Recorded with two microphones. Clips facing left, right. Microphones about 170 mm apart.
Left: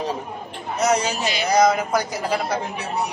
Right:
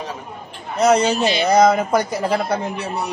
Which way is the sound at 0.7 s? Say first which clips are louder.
Right 5 dB; 55° right (ahead or behind).